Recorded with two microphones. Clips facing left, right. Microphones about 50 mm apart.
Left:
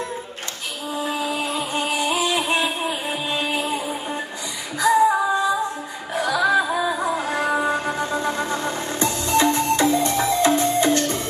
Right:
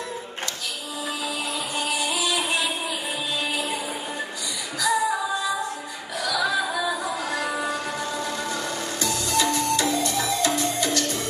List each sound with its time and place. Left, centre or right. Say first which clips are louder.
0.9 s music: left 6 dB; left
4.7 s female singing: left 7 dB; left
6.1 s music: left 6 dB; left